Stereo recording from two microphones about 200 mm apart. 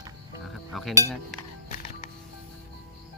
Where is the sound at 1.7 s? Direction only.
40° left (ahead or behind).